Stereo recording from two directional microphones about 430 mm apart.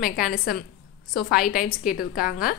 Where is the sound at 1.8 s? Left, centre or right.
Centre.